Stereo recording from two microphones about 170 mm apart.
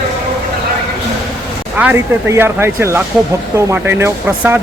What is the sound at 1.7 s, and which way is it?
Speech, 10° right (ahead or behind).